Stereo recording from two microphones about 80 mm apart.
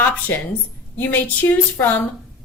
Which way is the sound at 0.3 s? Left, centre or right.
Left.